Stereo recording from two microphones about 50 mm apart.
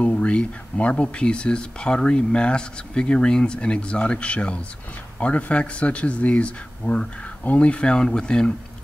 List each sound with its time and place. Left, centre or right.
0.0 s speech: left